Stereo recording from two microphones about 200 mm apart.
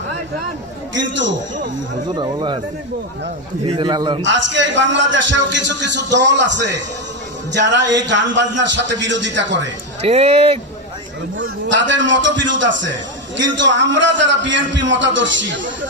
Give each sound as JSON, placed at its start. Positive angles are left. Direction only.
{"t": 0.9, "sound": "a man's voice", "side_deg": -65}
{"t": 2.1, "sound": "a man's voice", "side_deg": -20}
{"t": 3.6, "sound": "a man's voice", "side_deg": -25}
{"t": 4.2, "sound": "a man's voice", "side_deg": -65}
{"t": 10.0, "sound": "speech", "side_deg": -30}
{"t": 11.3, "sound": "a man's voice", "side_deg": -65}